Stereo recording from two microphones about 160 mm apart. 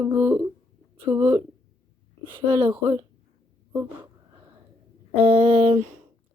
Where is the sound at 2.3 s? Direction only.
35° right (ahead or behind).